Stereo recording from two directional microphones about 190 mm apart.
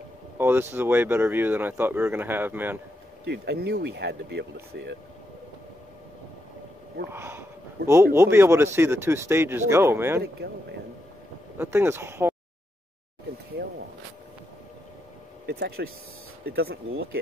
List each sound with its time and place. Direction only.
0.4 s speech: 10° right (ahead or behind)
3.3 s speech: 60° right (ahead or behind)
7.1 s speech: 10° right (ahead or behind)
11.5 s speech: 10° right (ahead or behind)
15.4 s speech: 60° right (ahead or behind)